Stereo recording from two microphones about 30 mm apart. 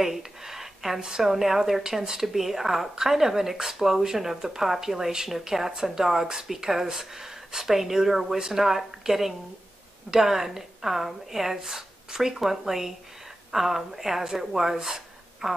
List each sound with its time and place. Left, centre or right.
0.0 s speech: centre